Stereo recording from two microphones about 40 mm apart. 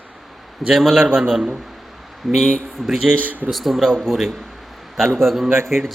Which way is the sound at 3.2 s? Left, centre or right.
Right.